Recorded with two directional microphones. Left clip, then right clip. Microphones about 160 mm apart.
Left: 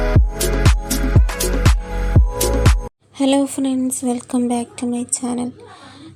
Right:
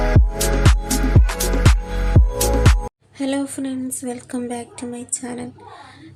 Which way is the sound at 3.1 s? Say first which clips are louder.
Left 7 dB; 30° left (ahead or behind).